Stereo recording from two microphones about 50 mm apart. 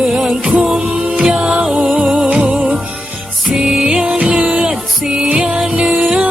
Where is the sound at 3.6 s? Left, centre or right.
Centre.